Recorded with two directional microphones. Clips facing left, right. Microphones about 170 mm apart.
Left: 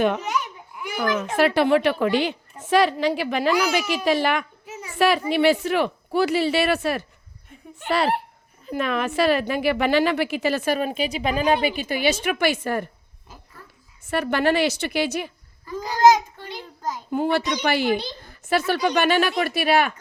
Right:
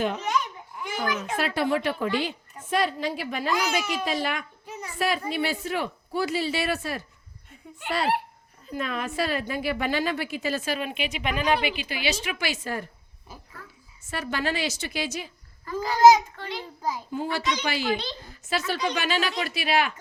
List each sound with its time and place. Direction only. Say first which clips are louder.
0.9 s a sound: left 5 dB; 60° left (ahead or behind)
1.4 s a woman's voice: left 8 dB; 70° left (ahead or behind)
10.8 s speech: left 6 dB; 40° left (ahead or behind)
11.7 s a woman's voice: left 7 dB; 45° left (ahead or behind)
14.1 s a woman's voice: left 8 dB; 60° left (ahead or behind)
15.6 s speech: right 1 dB; 15° left (ahead or behind)
17.1 s a woman's voice: left 9 dB; 60° left (ahead or behind)